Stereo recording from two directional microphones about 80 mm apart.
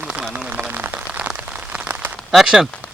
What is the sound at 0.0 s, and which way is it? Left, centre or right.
Rain on surface, centre.